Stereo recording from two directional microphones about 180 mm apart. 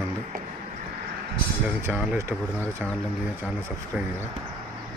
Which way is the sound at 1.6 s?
10° right (ahead or behind).